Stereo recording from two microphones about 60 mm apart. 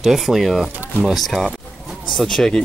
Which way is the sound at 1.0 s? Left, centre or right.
Centre.